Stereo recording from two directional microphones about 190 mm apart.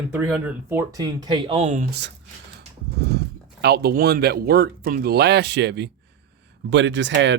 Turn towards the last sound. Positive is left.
turn(degrees=-70)  # may be behind; listen again after turning